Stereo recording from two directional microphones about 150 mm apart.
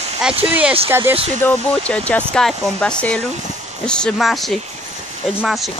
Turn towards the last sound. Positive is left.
turn(degrees=0)  # may be behind; listen again after turning